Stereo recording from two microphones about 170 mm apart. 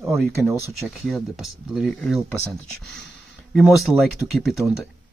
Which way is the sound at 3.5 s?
Centre (ahead or behind).